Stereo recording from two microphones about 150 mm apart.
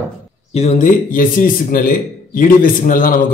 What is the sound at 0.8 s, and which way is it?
A man's voice, 65° left (ahead or behind).